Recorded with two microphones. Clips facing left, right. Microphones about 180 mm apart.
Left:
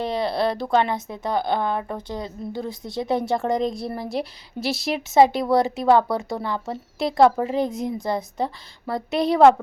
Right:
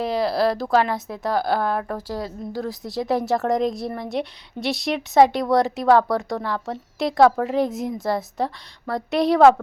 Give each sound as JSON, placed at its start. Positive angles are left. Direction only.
{"t": 0.0, "sound": "speech", "side_deg": 0}